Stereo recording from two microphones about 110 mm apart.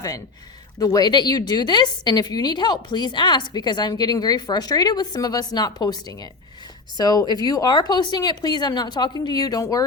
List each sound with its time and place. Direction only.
0.8 s a woman's voice: 35° left (ahead or behind)